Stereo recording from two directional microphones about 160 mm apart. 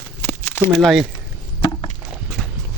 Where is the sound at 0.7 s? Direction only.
Centre (ahead or behind).